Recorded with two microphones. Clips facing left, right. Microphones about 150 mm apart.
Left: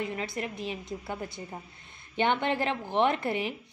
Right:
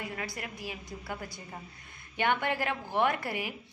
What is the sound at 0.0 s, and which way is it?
A woman's voice, 25° left (ahead or behind).